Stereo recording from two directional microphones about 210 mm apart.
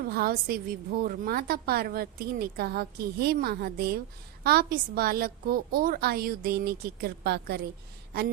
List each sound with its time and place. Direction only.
0.0 s a woman's voice: 45° right (ahead or behind)